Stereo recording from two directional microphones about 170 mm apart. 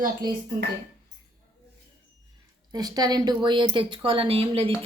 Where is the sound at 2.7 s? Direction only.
25° right (ahead or behind).